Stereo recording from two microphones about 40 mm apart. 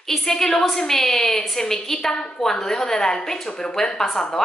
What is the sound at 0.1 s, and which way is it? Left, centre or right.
A woman's voice, centre.